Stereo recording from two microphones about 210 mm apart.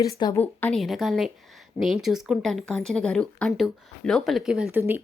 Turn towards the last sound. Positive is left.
turn(degrees=-5)  # may be behind; listen again after turning